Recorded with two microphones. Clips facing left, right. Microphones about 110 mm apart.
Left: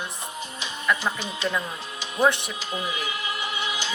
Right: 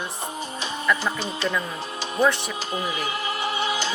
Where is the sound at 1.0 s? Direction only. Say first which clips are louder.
Right 2 dB; 35° right (ahead or behind).